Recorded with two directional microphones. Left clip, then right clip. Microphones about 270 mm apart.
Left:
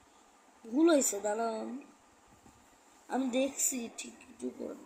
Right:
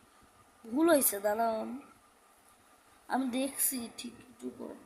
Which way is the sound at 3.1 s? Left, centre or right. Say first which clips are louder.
Left 1 dB; right.